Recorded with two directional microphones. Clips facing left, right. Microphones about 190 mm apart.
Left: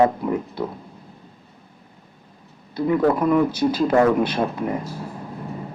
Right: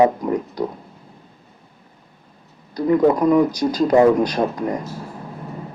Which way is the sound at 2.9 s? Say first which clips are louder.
Right 3 dB; 15° right (ahead or behind).